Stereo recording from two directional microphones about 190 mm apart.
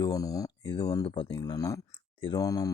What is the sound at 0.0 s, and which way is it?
Speech, 20° left (ahead or behind).